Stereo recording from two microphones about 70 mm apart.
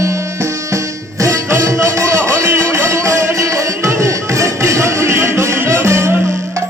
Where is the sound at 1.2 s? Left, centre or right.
Right.